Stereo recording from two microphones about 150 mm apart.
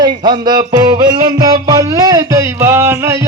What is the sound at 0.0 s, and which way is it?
Speech, 30° right (ahead or behind).